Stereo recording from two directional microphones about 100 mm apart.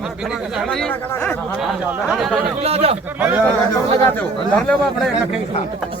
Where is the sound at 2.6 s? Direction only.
85° right.